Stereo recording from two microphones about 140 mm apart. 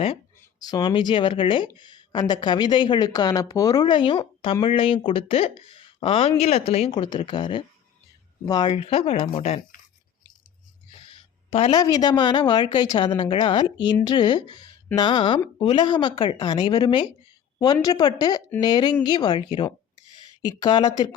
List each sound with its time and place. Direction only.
0.6 s speech: 30° left (ahead or behind); by 9.6 s 45° left (ahead or behind)
11.5 s speech: 40° left (ahead or behind)
11.8 s a woman's voice: 30° left (ahead or behind)